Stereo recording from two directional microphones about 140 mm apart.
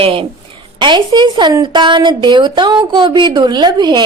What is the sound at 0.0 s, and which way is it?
A woman's voice, 40° right (ahead or behind).